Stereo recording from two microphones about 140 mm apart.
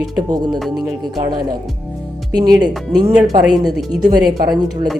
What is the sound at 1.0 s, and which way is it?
Speech, 30° right (ahead or behind).